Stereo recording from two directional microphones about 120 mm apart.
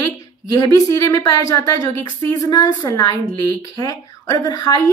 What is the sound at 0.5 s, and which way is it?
Speech, 30° left (ahead or behind).